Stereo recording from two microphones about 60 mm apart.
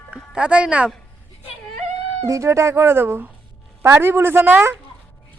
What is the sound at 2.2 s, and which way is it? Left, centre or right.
Speech, right.